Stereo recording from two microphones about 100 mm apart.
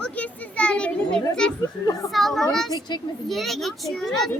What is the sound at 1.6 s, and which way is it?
Speech, 35° left (ahead or behind).